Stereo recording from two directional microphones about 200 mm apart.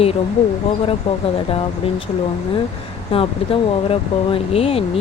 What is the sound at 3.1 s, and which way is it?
Speech, 25° left (ahead or behind).